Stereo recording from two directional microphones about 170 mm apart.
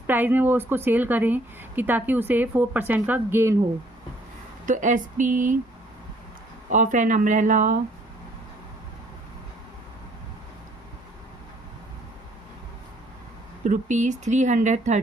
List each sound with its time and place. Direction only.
0.1 s a woman's voice: 10° right (ahead or behind)
4.6 s speech: 45° right (ahead or behind)
6.7 s speech: 50° right (ahead or behind)
13.7 s speech: 45° right (ahead or behind)